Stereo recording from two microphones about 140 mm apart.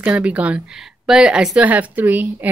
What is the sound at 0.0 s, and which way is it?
A woman's voice, 10° right (ahead or behind).